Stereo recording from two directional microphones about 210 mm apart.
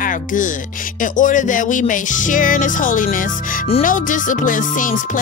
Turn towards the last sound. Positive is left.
turn(degrees=40)  # may be behind; listen again after turning